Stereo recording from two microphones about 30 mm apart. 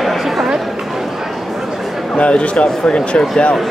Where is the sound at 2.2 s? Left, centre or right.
Left.